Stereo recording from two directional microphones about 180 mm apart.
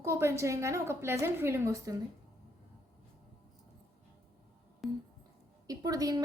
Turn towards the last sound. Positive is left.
turn(degrees=-20)  # may be behind; listen again after turning